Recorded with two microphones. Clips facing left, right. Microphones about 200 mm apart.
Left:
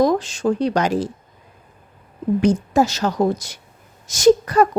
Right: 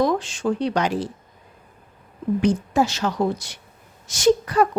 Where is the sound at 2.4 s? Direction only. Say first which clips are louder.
Left 3 dB; 40° left (ahead or behind).